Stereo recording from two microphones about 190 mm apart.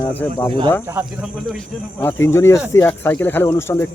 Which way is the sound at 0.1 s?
10° left (ahead or behind).